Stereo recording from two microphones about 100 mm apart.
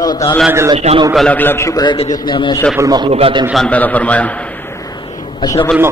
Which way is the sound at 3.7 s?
15° left (ahead or behind).